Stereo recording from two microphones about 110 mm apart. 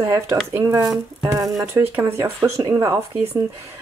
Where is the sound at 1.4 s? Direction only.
Centre (ahead or behind).